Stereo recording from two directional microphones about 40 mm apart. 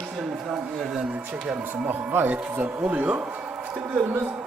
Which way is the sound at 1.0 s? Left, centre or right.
Right.